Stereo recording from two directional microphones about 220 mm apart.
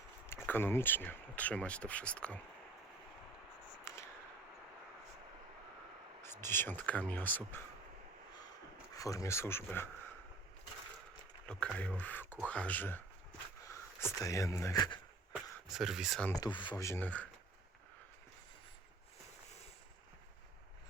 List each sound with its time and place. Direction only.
0.3 s speech: 10° left (ahead or behind)
3.9 s a sound: 10° left (ahead or behind)
6.2 s speech: 10° left (ahead or behind)
9.0 s speech: 15° left (ahead or behind)
11.4 s speech: 5° left (ahead or behind)
14.0 s speech: 15° left (ahead or behind)
15.7 s speech: centre (ahead or behind)
16.3 s speech: 20° left (ahead or behind)